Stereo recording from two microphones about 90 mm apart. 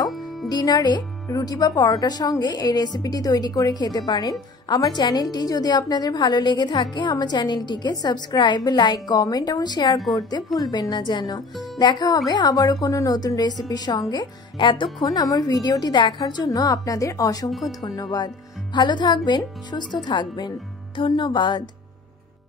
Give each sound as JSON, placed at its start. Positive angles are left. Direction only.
{"t": 0.1, "sound": "music", "side_deg": 0}
{"t": 0.5, "sound": "speech", "side_deg": 50}
{"t": 11.5, "sound": "speech", "side_deg": 0}
{"t": 11.8, "sound": "speech", "side_deg": 50}
{"t": 14.1, "sound": "speech", "side_deg": 65}
{"t": 15.0, "sound": "speech", "side_deg": 45}
{"t": 20.9, "sound": "speech", "side_deg": 65}